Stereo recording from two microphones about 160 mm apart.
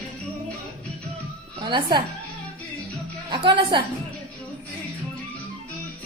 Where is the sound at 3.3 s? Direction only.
30° right (ahead or behind).